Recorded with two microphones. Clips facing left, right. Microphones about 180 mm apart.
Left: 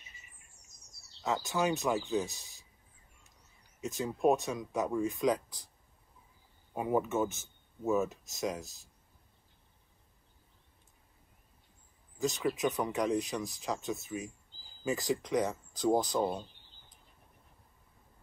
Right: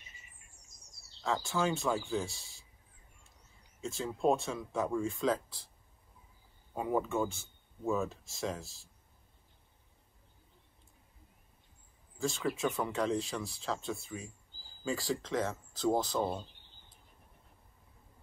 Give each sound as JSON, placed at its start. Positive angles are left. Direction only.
{"t": 1.2, "sound": "speech", "side_deg": 20}
{"t": 3.8, "sound": "speech", "side_deg": 20}
{"t": 6.7, "sound": "speech", "side_deg": 20}
{"t": 12.2, "sound": "speech", "side_deg": 20}